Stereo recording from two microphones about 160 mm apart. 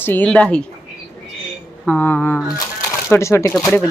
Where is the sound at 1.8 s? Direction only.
10° left (ahead or behind).